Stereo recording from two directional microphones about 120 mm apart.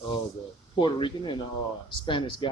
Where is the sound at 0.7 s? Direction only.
40° left (ahead or behind).